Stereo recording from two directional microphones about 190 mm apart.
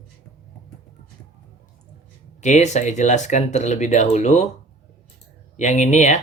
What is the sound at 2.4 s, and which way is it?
Speech, 40° left (ahead or behind).